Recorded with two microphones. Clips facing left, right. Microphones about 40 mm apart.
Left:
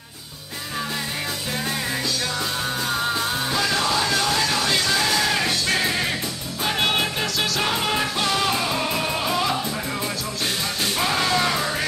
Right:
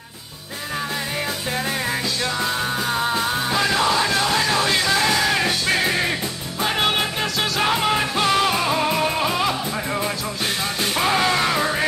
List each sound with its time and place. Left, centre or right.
2.4 s music: centre
11.0 s music: centre